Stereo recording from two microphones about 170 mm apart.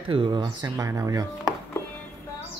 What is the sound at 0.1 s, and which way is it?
Speech, 25° right (ahead or behind).